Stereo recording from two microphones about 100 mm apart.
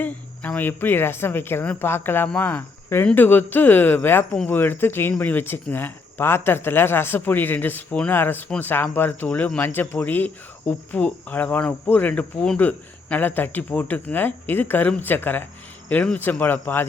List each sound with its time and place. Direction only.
0.0 s speech: 15° left (ahead or behind)